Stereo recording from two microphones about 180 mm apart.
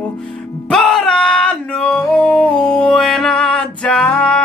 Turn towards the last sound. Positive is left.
turn(degrees=5)  # may be behind; listen again after turning